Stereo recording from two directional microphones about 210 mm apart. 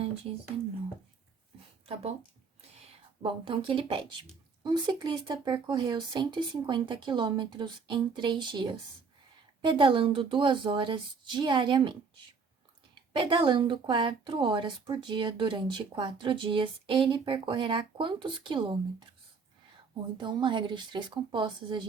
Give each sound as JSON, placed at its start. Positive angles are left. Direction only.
{"t": 3.2, "sound": "speech", "side_deg": -25}
{"t": 20.1, "sound": "speech", "side_deg": -20}